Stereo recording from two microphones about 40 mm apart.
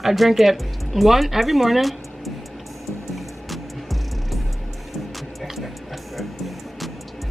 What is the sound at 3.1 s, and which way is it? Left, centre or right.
Music, centre.